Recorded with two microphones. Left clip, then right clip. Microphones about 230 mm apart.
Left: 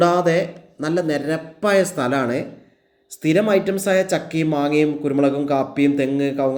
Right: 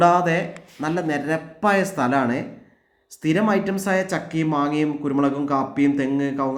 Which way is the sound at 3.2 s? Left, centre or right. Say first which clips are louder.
Left 4 dB; right.